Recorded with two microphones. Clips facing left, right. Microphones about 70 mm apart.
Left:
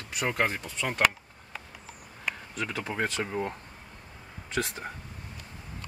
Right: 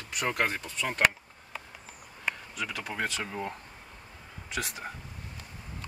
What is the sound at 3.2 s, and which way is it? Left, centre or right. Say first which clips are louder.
Speech: left 4 dB; centre.